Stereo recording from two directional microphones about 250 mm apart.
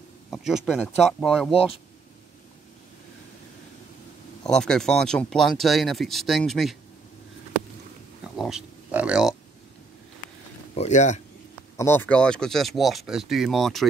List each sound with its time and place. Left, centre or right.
0.3 s speech: centre
4.5 s speech: centre
8.4 s speech: centre
10.7 s speech: left
11.7 s speech: centre